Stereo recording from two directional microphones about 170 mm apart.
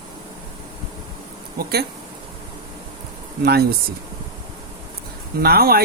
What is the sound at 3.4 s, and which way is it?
Speech, 70° right (ahead or behind).